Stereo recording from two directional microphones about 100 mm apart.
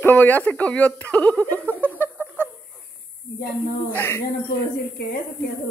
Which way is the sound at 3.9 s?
20° left (ahead or behind).